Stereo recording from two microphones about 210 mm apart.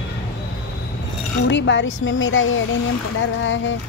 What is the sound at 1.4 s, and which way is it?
Speech, 60° left (ahead or behind).